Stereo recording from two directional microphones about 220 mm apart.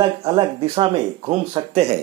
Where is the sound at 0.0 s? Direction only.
20° right (ahead or behind).